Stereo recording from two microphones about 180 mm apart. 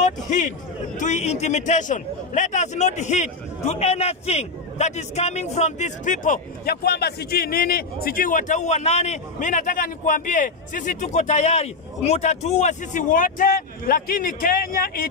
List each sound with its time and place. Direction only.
0.0 s a man's voice: 45° left (ahead or behind)